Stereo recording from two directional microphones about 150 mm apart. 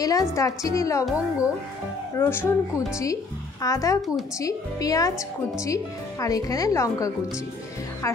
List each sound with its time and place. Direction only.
0.0 s a woman's voice: 20° left (ahead or behind)
1.0 s speech: 5° right (ahead or behind)
2.1 s speech: 15° left (ahead or behind)
3.6 s a woman's voice: 20° left (ahead or behind)